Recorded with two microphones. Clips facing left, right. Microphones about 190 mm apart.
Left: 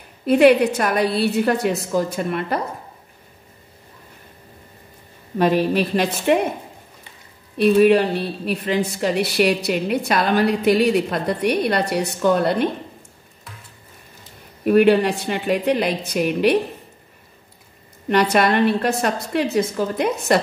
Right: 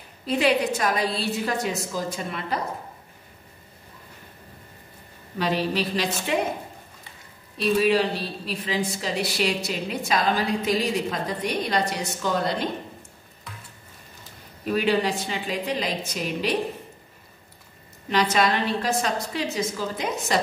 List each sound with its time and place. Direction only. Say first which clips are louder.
0.2 s a woman's voice: left 9 dB; 60° left (ahead or behind)
5.4 s a woman's voice: left 7 dB; 55° left (ahead or behind)
7.5 s a woman's voice: left 7 dB; 60° left (ahead or behind)
14.6 s a woman's voice: left 9 dB; 60° left (ahead or behind)
18.0 s a woman's voice: left 5 dB; 60° left (ahead or behind)